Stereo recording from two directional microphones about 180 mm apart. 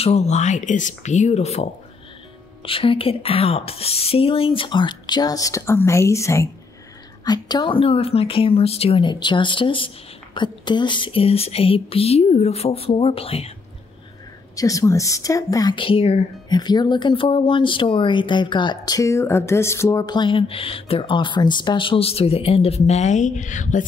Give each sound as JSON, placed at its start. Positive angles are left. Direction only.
{"t": 0.0, "sound": "a woman's voice", "side_deg": 35}
{"t": 14.5, "sound": "speech", "side_deg": 20}